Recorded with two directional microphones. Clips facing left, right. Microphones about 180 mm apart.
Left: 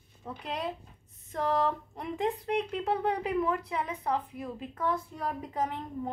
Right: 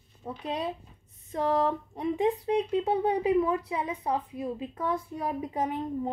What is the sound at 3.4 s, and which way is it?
Speech, 10° right (ahead or behind).